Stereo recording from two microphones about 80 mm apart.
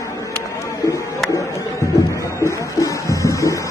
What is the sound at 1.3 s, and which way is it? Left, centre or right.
Music, left.